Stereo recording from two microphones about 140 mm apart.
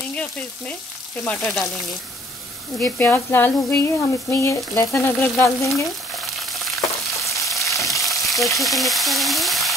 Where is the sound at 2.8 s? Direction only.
15° left (ahead or behind).